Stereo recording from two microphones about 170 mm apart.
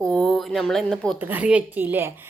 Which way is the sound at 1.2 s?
10° right (ahead or behind).